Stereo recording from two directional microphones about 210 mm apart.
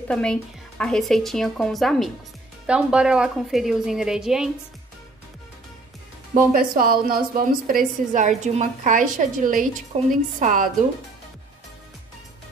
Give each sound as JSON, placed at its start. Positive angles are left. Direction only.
{"t": 0.1, "sound": "speech", "side_deg": 5}
{"t": 6.5, "sound": "a woman's voice", "side_deg": -45}